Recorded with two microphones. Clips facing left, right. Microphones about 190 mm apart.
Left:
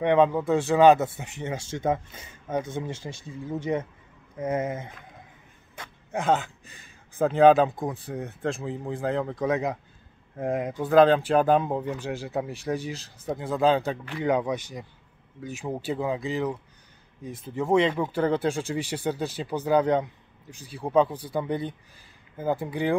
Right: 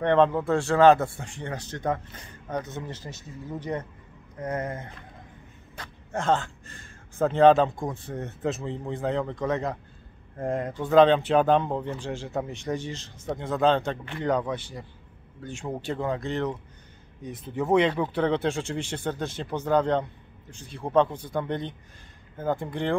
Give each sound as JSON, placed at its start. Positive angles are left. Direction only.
{"t": 0.0, "sound": "speech", "side_deg": 10}
{"t": 0.7, "sound": "speech", "side_deg": 15}
{"t": 1.4, "sound": "speech", "side_deg": 10}
{"t": 4.4, "sound": "speech", "side_deg": 10}
{"t": 6.1, "sound": "speech", "side_deg": 15}
{"t": 6.7, "sound": "speech", "side_deg": 0}